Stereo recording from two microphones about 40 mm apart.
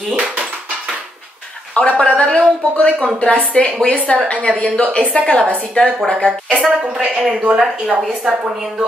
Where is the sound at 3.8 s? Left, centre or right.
Left.